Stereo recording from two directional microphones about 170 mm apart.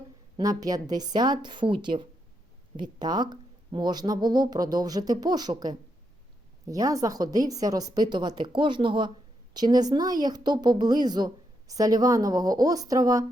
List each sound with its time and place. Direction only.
0.3 s a woman's voice: 20° right (ahead or behind)